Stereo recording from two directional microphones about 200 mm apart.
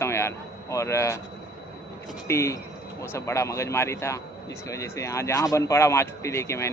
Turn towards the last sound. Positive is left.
turn(degrees=15)  # may be behind; listen again after turning